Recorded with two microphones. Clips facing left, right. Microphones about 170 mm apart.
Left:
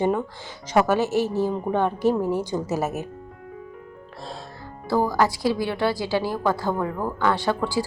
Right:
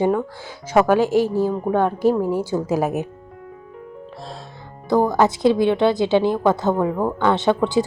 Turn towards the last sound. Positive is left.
turn(degrees=-20)  # may be behind; listen again after turning